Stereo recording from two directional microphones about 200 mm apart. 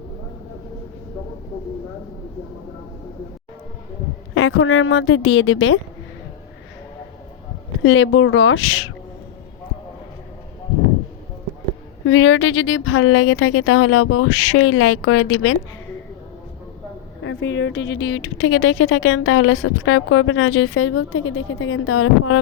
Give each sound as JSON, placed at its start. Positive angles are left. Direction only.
{"t": 4.4, "sound": "a woman's voice", "side_deg": 80}
{"t": 7.8, "sound": "a woman's voice", "side_deg": 75}
{"t": 12.0, "sound": "speech", "side_deg": 80}
{"t": 17.2, "sound": "speech", "side_deg": 65}